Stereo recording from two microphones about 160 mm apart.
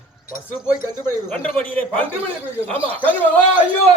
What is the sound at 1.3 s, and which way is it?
Speech, 10° left (ahead or behind).